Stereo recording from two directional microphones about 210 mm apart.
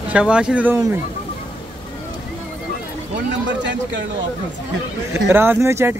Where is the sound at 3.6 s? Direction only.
60° right (ahead or behind).